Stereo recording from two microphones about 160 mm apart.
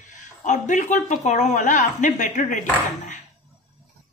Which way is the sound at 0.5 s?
50° left (ahead or behind).